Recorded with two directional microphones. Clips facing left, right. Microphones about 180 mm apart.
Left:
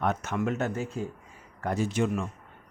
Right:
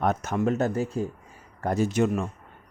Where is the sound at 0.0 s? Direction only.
40° right (ahead or behind).